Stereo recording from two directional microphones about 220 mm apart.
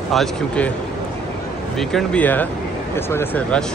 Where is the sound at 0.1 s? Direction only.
Centre (ahead or behind).